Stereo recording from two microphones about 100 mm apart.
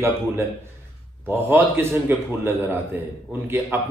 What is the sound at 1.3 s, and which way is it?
A man's voice, 20° right (ahead or behind).